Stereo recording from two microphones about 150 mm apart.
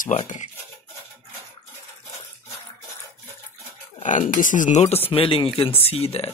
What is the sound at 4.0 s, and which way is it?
Speech, 60° left (ahead or behind).